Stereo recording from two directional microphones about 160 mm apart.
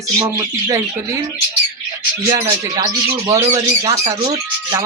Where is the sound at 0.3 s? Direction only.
20° right (ahead or behind).